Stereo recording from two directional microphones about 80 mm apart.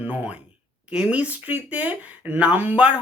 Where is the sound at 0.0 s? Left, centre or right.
Centre.